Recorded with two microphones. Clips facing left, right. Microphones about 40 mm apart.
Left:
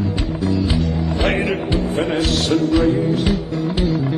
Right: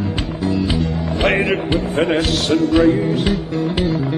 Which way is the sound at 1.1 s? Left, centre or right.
Right.